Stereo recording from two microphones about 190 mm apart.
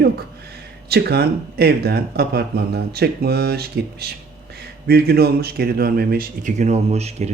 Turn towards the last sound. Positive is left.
turn(degrees=-35)  # may be behind; listen again after turning